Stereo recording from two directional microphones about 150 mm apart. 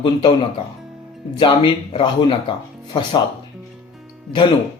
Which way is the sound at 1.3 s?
35° left (ahead or behind).